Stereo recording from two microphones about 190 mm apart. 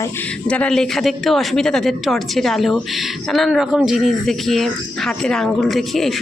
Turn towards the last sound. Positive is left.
turn(degrees=0)  # may be behind; listen again after turning